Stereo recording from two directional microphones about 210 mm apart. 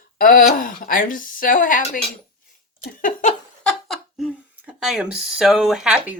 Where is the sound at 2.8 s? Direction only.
40° left (ahead or behind).